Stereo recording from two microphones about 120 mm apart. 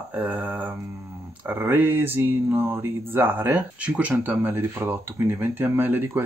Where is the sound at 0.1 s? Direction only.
15° right (ahead or behind).